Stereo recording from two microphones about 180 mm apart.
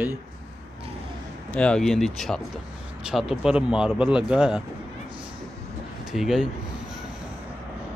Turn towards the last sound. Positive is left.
turn(degrees=0)  # may be behind; listen again after turning